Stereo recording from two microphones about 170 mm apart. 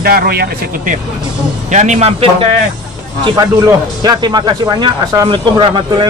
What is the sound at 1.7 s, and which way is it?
Speech, 45° right (ahead or behind).